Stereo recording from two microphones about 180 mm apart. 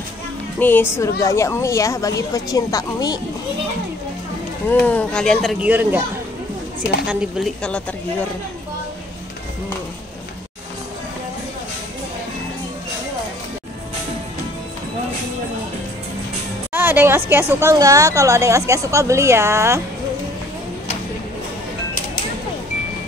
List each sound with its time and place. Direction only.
0.6 s speech: 10° left (ahead or behind)
4.6 s speech: 10° left (ahead or behind); by 6.0 s 10° right (ahead or behind)
7.1 s speech: centre (ahead or behind)
16.7 s music: 10° right (ahead or behind)
17.3 s a woman's voice: 10° right (ahead or behind)